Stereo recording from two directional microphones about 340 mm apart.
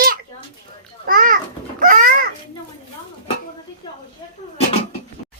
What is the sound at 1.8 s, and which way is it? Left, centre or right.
Babbling, right.